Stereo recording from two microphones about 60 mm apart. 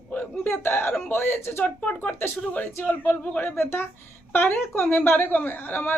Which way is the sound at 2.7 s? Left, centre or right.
Left.